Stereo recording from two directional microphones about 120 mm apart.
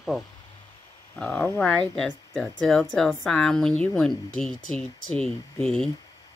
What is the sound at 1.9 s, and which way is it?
Speech, 5° left (ahead or behind).